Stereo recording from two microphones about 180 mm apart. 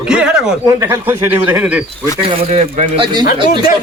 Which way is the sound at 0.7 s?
15° right (ahead or behind).